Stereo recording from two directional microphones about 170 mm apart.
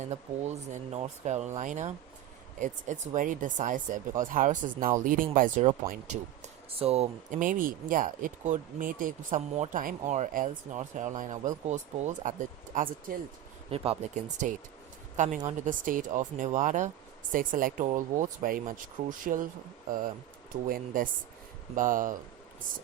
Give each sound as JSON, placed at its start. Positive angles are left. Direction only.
{"t": 0.0, "sound": "speech", "side_deg": -40}
{"t": 13.7, "sound": "a woman's voice", "side_deg": -35}
{"t": 20.7, "sound": "speech", "side_deg": -55}